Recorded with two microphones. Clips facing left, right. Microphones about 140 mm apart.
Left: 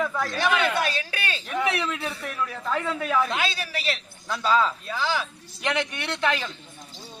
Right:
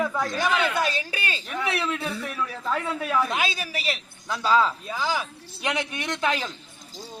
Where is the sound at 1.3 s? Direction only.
5° right (ahead or behind).